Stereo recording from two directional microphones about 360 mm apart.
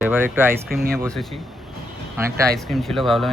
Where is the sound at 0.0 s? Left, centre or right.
Centre.